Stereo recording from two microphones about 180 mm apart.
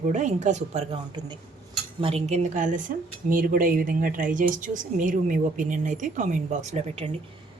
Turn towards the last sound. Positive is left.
turn(degrees=-35)  # may be behind; listen again after turning